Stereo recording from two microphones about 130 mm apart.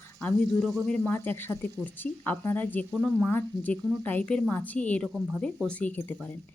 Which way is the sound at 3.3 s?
15° left (ahead or behind).